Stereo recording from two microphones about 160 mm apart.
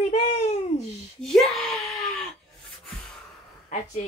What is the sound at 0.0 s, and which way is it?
Babbling, 40° left (ahead or behind).